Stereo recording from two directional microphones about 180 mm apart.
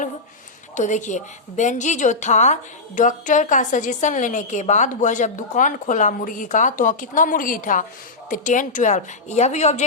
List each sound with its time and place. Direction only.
0.8 s a woman's voice: 40° left (ahead or behind)